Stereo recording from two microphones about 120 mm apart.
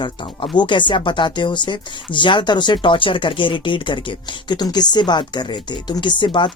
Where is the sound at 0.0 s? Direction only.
40° left (ahead or behind).